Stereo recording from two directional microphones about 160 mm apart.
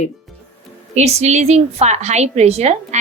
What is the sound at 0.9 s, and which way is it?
A woman's voice, 45° right (ahead or behind).